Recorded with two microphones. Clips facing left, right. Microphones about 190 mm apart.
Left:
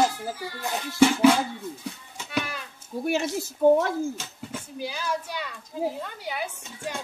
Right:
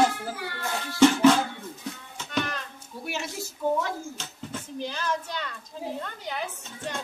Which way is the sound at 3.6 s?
50° left (ahead or behind).